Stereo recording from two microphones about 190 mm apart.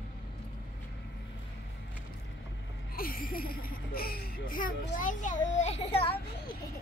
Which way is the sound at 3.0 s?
50° left (ahead or behind).